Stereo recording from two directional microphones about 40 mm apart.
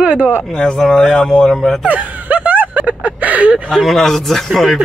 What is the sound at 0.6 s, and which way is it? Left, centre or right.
Speech, centre.